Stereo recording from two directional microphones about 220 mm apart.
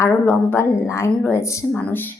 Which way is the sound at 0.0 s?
10° left (ahead or behind).